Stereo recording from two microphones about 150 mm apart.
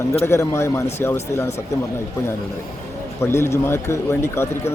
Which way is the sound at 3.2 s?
15° left (ahead or behind).